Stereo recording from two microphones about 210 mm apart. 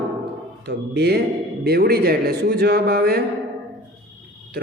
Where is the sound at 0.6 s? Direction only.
50° right (ahead or behind).